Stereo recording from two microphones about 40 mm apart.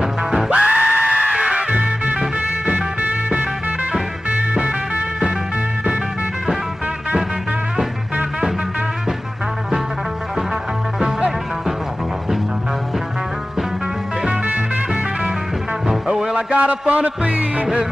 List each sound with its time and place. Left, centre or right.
0.0 s music: centre
0.5 s music: right
1.7 s music: right
11.0 s music: centre
15.9 s music: centre
16.3 s music: right